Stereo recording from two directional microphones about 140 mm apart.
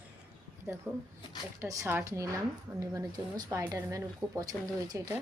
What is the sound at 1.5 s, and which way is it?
Speech, 20° right (ahead or behind).